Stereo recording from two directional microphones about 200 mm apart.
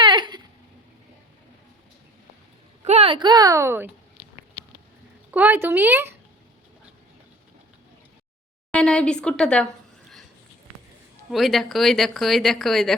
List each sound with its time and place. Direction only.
0.0 s a sound: 25° right (ahead or behind)
2.8 s speech: 30° right (ahead or behind); by 3.9 s 10° right (ahead or behind)
5.3 s speech: 10° right (ahead or behind)
8.7 s speech: 5° left (ahead or behind)
11.3 s speech: centre (ahead or behind)